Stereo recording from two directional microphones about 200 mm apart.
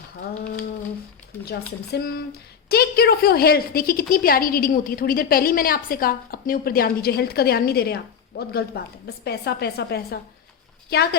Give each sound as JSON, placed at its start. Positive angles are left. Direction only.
{"t": 1.5, "sound": "a woman's voice", "side_deg": 50}